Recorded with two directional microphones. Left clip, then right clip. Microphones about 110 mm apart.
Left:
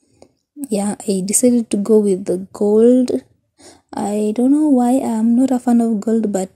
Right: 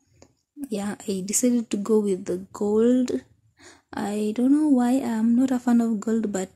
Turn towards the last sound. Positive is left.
turn(degrees=20)  # may be behind; listen again after turning